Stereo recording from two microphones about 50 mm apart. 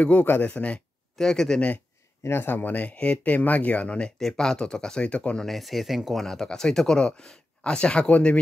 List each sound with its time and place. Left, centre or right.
0.0 s speech: left
1.1 s speech: centre
2.2 s speech: left
2.5 s speech: left
4.2 s speech: centre
5.4 s speech: centre
6.2 s speech: centre